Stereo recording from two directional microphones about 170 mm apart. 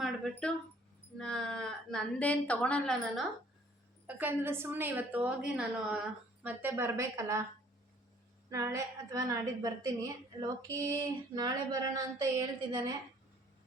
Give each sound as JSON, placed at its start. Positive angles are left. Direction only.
{"t": 0.0, "sound": "a sound", "side_deg": 5}
{"t": 1.2, "sound": "a woman's voice", "side_deg": 5}
{"t": 4.0, "sound": "a woman's voice", "side_deg": -10}
{"t": 8.4, "sound": "a woman's voice", "side_deg": -20}